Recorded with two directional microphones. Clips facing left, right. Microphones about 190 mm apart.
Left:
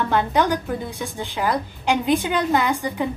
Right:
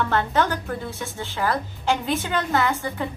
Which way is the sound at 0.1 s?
15° left (ahead or behind).